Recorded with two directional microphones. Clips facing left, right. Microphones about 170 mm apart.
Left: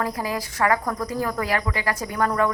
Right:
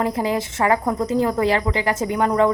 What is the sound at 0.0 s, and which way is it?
A woman's voice, 25° right (ahead or behind).